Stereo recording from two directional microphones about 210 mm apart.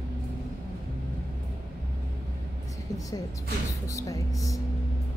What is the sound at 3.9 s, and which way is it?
Speech, 15° left (ahead or behind).